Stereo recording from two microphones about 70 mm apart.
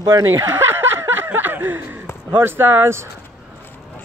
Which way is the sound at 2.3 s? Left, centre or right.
Right.